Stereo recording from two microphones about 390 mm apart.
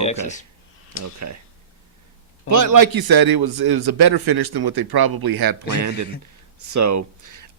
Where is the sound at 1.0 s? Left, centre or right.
Right.